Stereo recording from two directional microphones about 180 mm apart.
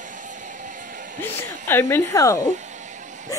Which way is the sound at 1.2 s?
15° left (ahead or behind).